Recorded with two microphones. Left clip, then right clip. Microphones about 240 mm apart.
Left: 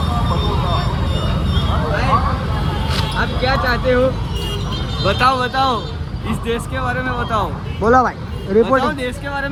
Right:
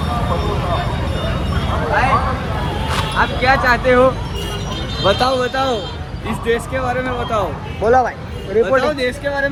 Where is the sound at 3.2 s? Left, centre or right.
Right.